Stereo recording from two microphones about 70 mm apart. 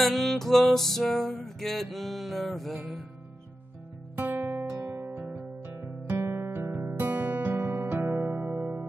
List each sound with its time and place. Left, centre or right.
0.0 s music: centre
4.2 s music: right